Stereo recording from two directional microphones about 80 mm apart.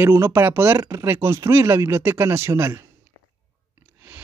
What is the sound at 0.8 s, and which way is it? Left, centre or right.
Speech, right.